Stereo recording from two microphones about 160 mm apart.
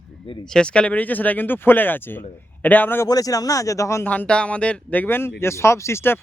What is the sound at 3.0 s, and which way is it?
Speech, 20° left (ahead or behind).